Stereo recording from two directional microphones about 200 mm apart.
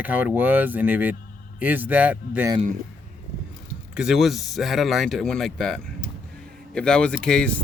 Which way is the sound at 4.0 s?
Centre (ahead or behind).